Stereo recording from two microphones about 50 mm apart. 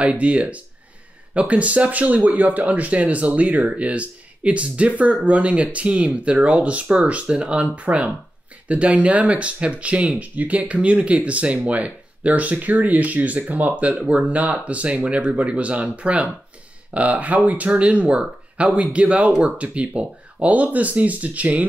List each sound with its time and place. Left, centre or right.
0.0 s speech: right